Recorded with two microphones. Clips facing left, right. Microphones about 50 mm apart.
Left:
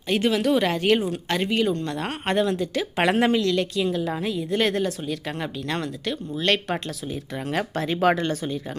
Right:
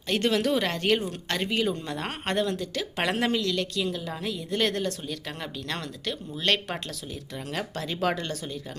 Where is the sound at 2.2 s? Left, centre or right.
Centre.